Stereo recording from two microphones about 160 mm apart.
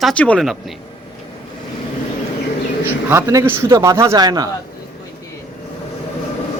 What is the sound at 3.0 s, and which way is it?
Speech, 20° right (ahead or behind).